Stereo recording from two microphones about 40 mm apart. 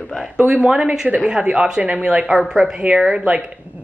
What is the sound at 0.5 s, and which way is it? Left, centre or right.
Speech, right.